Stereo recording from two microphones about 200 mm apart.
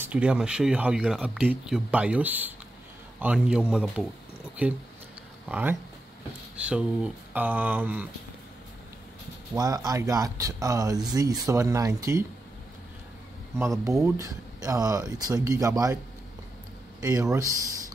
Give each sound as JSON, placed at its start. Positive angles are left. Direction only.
{"t": 0.0, "sound": "speech", "side_deg": -5}
{"t": 9.6, "sound": "speech", "side_deg": -20}
{"t": 13.6, "sound": "speech", "side_deg": -15}
{"t": 17.0, "sound": "speech", "side_deg": -15}